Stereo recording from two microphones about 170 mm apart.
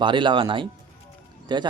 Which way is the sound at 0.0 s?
30° right (ahead or behind).